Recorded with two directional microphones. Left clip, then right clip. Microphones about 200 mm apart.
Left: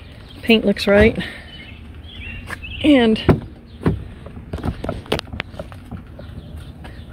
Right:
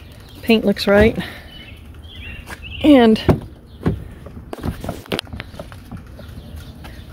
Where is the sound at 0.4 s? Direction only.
15° right (ahead or behind).